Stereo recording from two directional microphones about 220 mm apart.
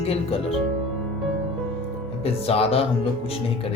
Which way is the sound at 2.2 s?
25° left (ahead or behind).